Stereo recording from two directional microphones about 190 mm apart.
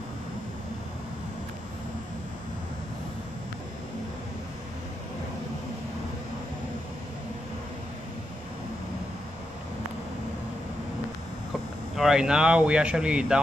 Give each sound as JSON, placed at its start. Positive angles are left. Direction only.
{"t": 11.9, "sound": "speech", "side_deg": 0}